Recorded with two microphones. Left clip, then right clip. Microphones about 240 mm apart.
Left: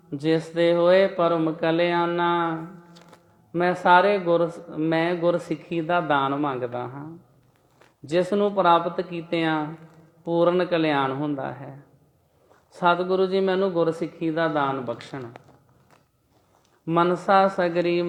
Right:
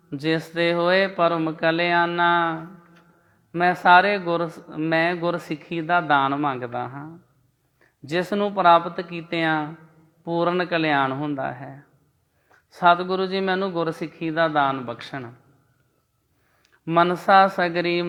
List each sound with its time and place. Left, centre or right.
0.1 s speech: right
16.8 s speech: right